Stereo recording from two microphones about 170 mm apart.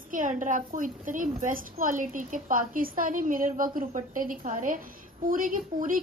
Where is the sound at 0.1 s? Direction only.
50° right (ahead or behind).